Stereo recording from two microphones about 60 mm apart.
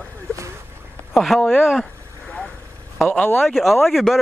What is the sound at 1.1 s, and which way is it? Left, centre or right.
Speech, centre.